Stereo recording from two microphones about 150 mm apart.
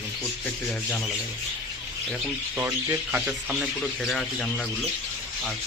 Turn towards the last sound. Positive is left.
turn(degrees=5)  # may be behind; listen again after turning